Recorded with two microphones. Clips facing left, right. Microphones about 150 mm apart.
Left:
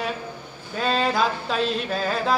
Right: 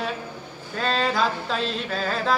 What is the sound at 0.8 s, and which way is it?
Speech, 5° left (ahead or behind).